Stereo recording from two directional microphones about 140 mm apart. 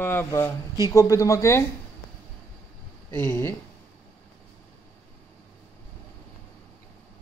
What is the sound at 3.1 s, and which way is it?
Speech, 15° left (ahead or behind).